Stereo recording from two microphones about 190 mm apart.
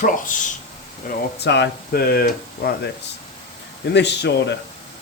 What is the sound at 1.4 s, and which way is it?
Speech, 65° left (ahead or behind).